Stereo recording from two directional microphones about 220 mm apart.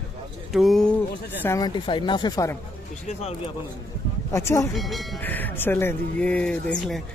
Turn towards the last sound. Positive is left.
turn(degrees=5)  # may be behind; listen again after turning